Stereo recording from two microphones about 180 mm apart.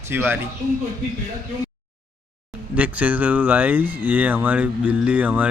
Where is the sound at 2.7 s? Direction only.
5° right (ahead or behind).